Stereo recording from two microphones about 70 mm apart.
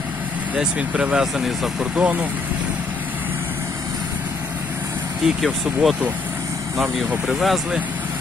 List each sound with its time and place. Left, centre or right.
0.5 s speech: centre
1.2 s speech: centre
5.2 s speech: centre
7.3 s speech: centre